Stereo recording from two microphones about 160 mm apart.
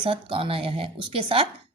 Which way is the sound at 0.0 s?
30° right (ahead or behind).